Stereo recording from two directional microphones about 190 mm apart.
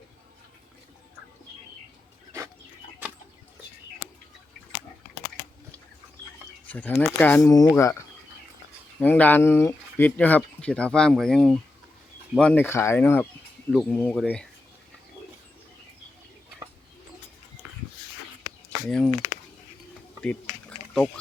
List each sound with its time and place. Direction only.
6.7 s speech: 10° left (ahead or behind)
18.9 s speech: 5° left (ahead or behind)
20.2 s a sound: 5° left (ahead or behind)